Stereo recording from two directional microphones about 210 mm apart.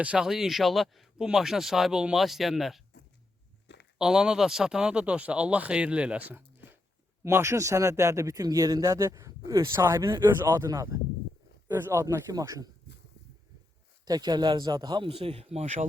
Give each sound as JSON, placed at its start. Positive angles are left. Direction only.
{"t": 0.0, "sound": "speech", "side_deg": -5}
{"t": 3.9, "sound": "speech", "side_deg": -5}
{"t": 14.0, "sound": "a man's voice", "side_deg": -20}